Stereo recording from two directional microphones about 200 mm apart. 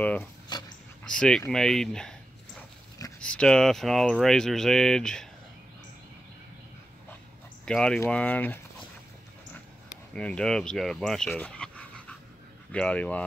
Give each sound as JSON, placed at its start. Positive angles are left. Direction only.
{"t": 0.0, "sound": "speech", "side_deg": 5}
{"t": 0.5, "sound": "dog", "side_deg": 20}
{"t": 1.0, "sound": "speech", "side_deg": 5}
{"t": 3.2, "sound": "speech", "side_deg": 5}
{"t": 7.6, "sound": "speech", "side_deg": 5}
{"t": 10.1, "sound": "speech", "side_deg": 5}